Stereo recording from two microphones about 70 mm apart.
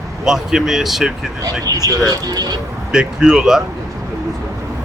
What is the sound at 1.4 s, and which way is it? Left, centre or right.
Speech, right.